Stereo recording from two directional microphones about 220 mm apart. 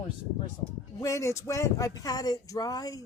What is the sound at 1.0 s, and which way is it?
Speech, 15° left (ahead or behind).